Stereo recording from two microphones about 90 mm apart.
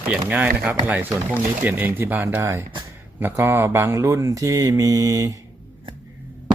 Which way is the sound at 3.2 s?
25° right (ahead or behind).